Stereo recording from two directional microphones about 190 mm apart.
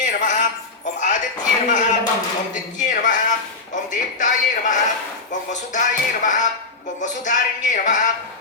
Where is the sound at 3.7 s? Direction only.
40° left (ahead or behind).